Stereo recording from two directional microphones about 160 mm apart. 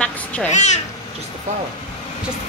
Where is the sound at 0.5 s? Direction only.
45° left (ahead or behind).